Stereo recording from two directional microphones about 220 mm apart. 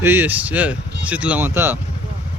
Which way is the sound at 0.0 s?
10° right (ahead or behind).